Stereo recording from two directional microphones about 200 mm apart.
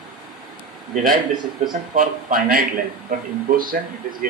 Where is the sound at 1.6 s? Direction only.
40° right (ahead or behind).